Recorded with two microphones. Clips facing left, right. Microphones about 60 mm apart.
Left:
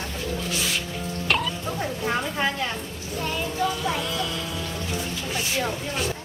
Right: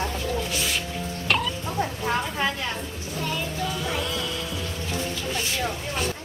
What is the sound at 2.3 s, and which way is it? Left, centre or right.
A woman's voice, centre.